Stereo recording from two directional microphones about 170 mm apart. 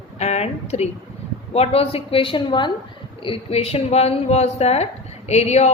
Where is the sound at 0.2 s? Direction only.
40° left (ahead or behind).